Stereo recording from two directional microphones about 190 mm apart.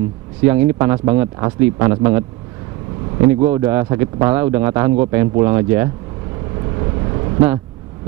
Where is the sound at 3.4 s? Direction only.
15° right (ahead or behind).